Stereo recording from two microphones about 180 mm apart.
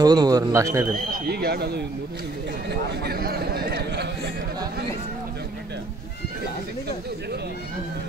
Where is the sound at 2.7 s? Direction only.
65° right (ahead or behind).